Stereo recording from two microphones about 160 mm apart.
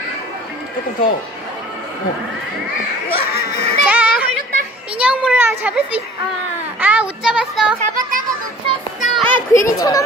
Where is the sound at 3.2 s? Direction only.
70° left (ahead or behind).